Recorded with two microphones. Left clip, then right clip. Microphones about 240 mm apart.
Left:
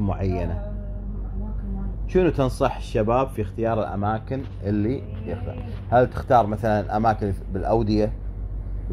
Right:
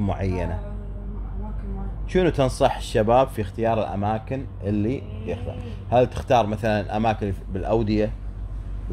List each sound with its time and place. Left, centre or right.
0.0 s speech: centre
2.1 s speech: centre